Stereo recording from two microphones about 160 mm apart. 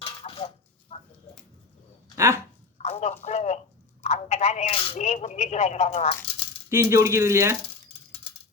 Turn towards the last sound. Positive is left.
turn(degrees=-15)  # may be behind; listen again after turning